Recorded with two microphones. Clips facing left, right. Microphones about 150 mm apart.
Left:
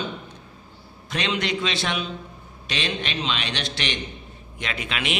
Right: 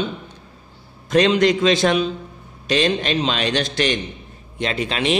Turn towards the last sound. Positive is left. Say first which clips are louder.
# right 8 dB
turn(degrees=-35)  # may be behind; listen again after turning